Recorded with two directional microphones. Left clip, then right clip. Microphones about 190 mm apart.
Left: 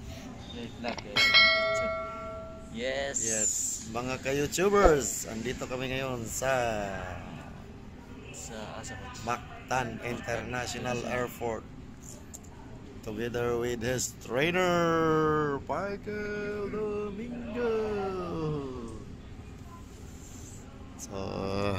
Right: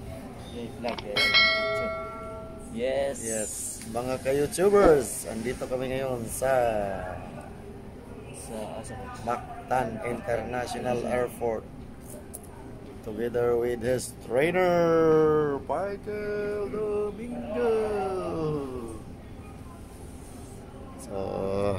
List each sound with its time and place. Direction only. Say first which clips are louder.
1.1 s bell: even; centre (ahead or behind)
2.7 s music: right 5 dB; 5° right (ahead or behind)
3.2 s speech: left 2 dB; 5° left (ahead or behind)
9.2 s speech: right 3 dB; 10° left (ahead or behind)
13.2 s speech: right 5 dB; 15° left (ahead or behind); by 17.0 s 35° left (ahead or behind)
17.6 s a sound: right 4 dB; 40° left (ahead or behind)
21.1 s speech: right 5 dB; 5° left (ahead or behind)